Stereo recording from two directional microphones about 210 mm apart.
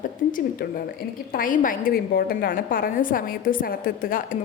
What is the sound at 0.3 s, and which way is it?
A woman's voice, 40° left (ahead or behind).